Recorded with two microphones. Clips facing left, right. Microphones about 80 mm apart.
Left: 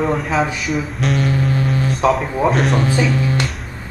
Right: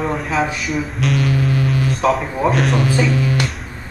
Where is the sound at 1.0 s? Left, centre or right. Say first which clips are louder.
Right 1 dB; left.